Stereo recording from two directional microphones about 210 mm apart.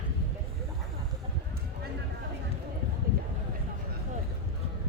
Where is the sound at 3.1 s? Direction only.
45° right (ahead or behind).